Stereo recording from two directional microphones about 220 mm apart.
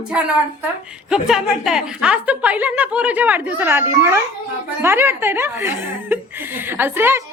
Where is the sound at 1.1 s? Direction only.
Centre (ahead or behind).